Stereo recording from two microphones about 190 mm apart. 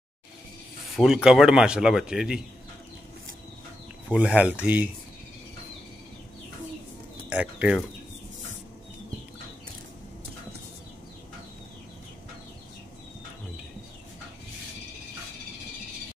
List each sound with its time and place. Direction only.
0.9 s speech: centre (ahead or behind)
4.1 s speech: 5° right (ahead or behind)
7.2 s speech: 5° right (ahead or behind)